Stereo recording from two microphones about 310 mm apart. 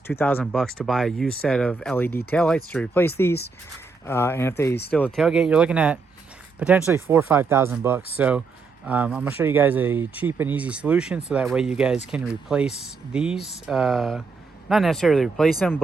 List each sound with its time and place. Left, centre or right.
0.1 s speech: centre